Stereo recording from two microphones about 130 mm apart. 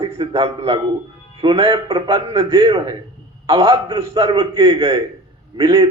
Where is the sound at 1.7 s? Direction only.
25° right (ahead or behind).